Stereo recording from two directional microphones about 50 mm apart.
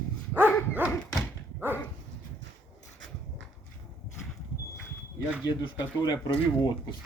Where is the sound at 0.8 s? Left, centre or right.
Right.